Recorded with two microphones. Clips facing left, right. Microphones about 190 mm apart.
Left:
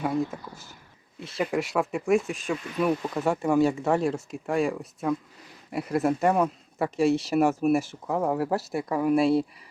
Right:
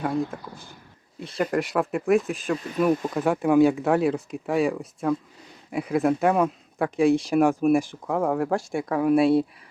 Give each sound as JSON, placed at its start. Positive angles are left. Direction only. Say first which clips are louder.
{"t": 0.0, "sound": "speech", "louder": "right 1 dB", "side_deg": 5}